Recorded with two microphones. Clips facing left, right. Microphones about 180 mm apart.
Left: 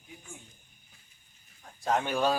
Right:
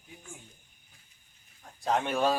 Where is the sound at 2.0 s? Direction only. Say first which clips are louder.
Right 1 dB; centre (ahead or behind).